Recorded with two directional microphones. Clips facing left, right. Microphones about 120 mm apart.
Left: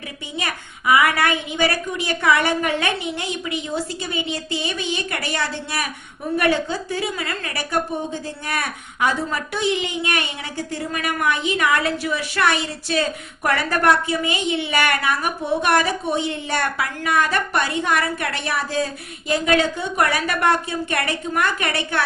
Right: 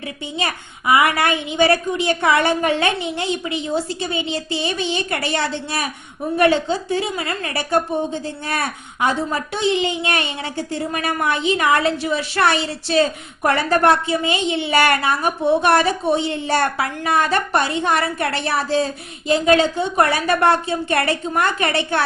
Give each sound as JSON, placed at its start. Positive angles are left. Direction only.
{"t": 0.3, "sound": "a woman's voice", "side_deg": -25}